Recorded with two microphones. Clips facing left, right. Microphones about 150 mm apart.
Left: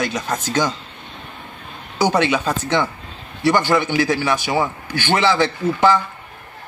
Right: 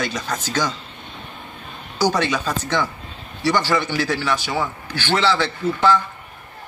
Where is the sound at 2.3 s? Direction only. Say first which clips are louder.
Left 3 dB; 20° left (ahead or behind).